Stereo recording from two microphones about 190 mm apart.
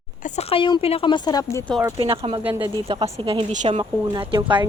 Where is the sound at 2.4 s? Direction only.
10° right (ahead or behind).